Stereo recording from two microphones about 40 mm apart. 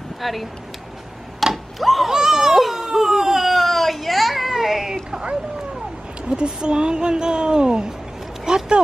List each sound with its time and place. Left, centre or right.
0.2 s speech: centre
1.4 s tick-tock: centre
2.0 s baby cry: centre
3.5 s a sound: centre
6.2 s speech: right
8.5 s a sound: right